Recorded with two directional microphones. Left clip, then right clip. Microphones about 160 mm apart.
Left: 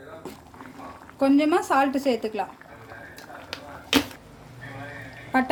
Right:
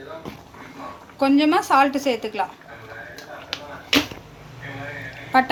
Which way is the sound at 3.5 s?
70° left (ahead or behind).